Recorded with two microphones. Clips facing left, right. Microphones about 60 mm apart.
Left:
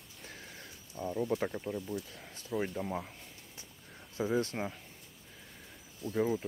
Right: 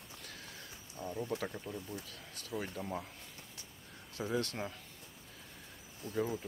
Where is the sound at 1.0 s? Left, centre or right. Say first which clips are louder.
Left 6 dB; centre.